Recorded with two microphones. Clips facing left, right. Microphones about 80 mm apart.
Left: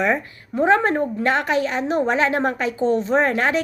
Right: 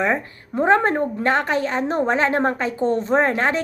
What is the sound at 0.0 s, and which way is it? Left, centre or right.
A woman's voice, right.